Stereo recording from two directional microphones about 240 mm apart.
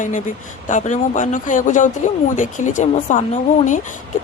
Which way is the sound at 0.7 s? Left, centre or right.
Left.